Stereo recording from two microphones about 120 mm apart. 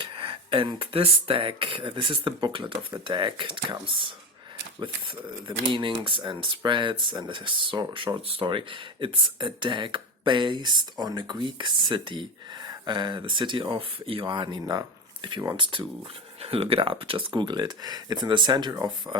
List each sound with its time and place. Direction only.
0.0 s speech: 45° right (ahead or behind)